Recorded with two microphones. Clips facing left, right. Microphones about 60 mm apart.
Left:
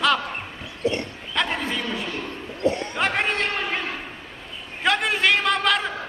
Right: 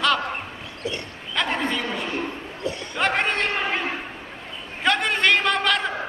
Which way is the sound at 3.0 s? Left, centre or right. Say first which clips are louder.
Right 2 dB; centre.